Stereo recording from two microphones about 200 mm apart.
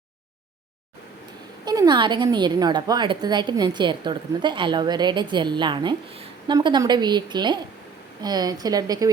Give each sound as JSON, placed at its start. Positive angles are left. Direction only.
{"t": 1.6, "sound": "a woman's voice", "side_deg": -20}